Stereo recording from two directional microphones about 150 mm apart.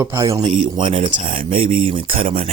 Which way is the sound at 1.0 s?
55° right (ahead or behind).